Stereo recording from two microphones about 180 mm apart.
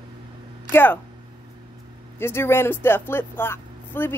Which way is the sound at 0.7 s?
10° left (ahead or behind).